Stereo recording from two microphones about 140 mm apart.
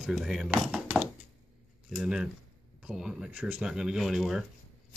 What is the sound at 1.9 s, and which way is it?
Speech, 5° right (ahead or behind).